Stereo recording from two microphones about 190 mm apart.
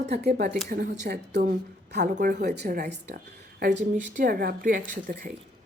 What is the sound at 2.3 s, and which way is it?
A woman's voice, 55° right (ahead or behind).